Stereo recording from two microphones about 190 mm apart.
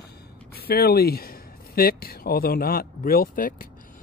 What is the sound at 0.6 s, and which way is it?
Speech, 55° left (ahead or behind).